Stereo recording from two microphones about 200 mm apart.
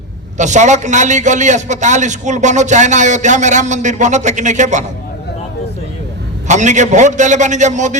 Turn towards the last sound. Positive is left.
turn(degrees=-35)  # may be behind; listen again after turning